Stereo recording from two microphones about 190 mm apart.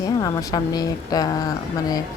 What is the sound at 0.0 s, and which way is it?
A woman's voice, 20° left (ahead or behind).